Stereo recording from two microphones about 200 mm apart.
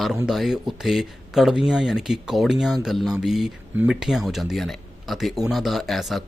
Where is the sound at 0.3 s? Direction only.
Centre (ahead or behind).